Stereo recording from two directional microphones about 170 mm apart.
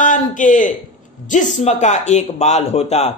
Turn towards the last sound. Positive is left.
turn(degrees=40)  # may be behind; listen again after turning